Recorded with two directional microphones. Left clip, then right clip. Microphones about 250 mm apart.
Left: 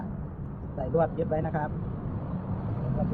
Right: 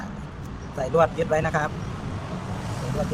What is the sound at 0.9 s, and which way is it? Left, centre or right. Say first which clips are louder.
Speech: right 6 dB; right.